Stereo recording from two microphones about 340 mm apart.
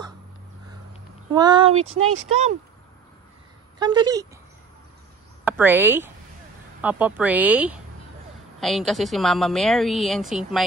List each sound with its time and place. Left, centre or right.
1.3 s speech: centre
1.8 s speech: right
3.8 s speech: centre
5.4 s a woman's voice: centre